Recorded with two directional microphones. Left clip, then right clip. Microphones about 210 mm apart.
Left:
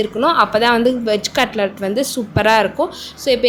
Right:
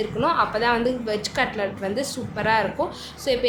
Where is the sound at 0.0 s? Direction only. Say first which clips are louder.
Left 7 dB; 30° left (ahead or behind).